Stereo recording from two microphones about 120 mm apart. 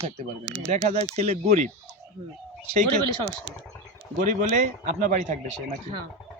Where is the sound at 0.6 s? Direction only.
75° right (ahead or behind).